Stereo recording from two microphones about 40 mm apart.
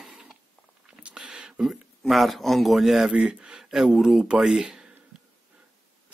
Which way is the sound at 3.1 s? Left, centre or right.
Right.